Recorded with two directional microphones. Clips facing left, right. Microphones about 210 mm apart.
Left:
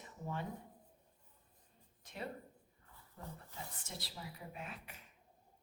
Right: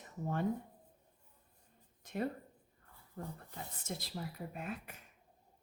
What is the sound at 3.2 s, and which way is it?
Speech, 50° right (ahead or behind).